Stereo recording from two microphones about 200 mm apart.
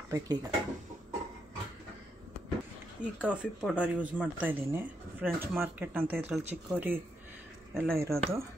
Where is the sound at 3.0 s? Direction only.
5° right (ahead or behind).